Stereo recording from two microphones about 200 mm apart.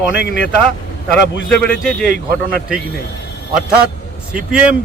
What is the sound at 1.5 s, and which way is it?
Speech, 5° left (ahead or behind).